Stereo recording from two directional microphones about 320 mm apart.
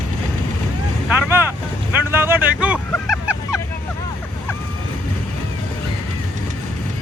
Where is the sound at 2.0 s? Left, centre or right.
Centre.